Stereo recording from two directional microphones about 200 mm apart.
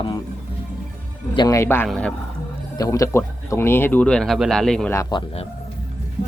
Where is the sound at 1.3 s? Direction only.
20° left (ahead or behind).